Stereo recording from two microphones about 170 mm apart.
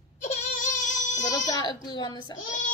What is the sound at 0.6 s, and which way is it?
Child singing, 45° left (ahead or behind).